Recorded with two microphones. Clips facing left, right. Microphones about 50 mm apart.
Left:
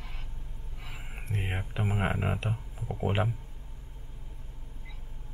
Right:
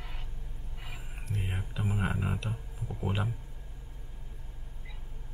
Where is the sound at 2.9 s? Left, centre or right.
Left.